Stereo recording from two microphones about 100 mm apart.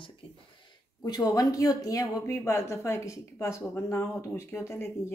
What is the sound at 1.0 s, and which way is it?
Speech, 40° left (ahead or behind).